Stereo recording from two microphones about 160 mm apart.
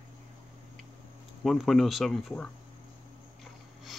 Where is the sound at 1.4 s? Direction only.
Centre (ahead or behind).